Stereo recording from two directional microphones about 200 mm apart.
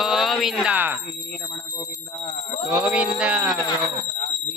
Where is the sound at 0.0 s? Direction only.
Centre (ahead or behind).